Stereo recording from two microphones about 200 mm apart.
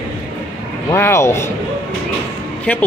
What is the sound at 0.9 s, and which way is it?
Speech, 15° left (ahead or behind).